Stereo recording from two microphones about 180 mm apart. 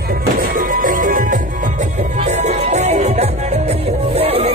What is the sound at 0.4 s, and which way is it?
Music, 50° right (ahead or behind).